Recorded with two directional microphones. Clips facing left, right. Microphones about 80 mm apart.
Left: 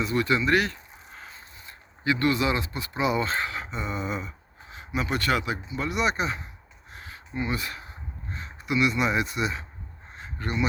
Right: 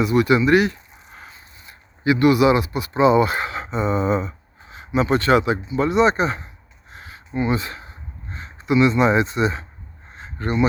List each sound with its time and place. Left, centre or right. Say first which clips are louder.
0.0 s speech: right 8 dB; centre
0.4 s a sound: right 7 dB; centre
2.9 s speech: right 10 dB; right
3.2 s speech: right 8 dB; centre; by 6.4 s right
6.9 s a sound: right 7 dB; right
8.3 s speech: right 8 dB; right